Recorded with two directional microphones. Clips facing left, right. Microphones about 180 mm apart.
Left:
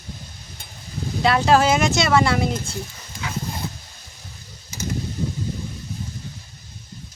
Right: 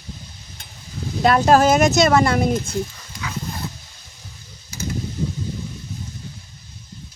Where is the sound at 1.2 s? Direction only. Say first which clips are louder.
Right 3 dB; 45° right (ahead or behind).